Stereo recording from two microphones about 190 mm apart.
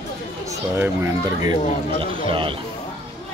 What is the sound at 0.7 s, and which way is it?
A man's voice, 15° right (ahead or behind).